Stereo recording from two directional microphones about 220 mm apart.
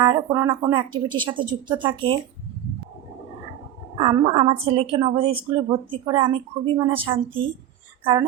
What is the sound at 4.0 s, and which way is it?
A woman's voice, 25° right (ahead or behind).